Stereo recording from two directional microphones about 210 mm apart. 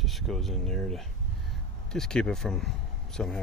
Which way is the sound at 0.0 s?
Centre (ahead or behind).